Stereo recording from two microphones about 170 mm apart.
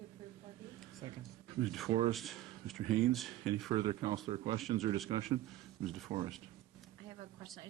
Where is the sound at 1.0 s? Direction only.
25° right (ahead or behind).